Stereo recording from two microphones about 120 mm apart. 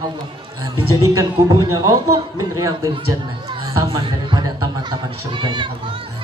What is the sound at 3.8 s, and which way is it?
Speech, 45° right (ahead or behind).